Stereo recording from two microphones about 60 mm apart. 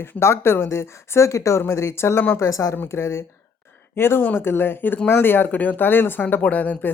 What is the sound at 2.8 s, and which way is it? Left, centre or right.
A woman's voice, left.